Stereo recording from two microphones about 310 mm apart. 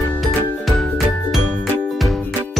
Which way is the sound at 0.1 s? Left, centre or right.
Centre.